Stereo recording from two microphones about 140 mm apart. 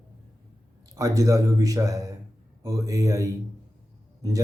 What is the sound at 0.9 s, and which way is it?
Speech, 25° right (ahead or behind).